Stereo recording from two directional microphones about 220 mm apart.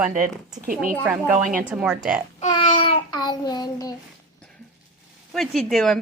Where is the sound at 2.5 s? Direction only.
20° left (ahead or behind).